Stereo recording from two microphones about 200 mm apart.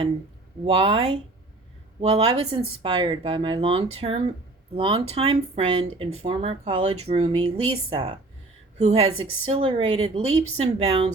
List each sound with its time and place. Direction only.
0.6 s a woman's voice: 30° right (ahead or behind)